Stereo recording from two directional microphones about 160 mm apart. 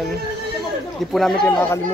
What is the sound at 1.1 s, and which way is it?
Speech, centre (ahead or behind).